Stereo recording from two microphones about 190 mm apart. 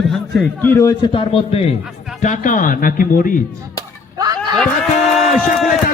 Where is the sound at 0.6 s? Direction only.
10° left (ahead or behind).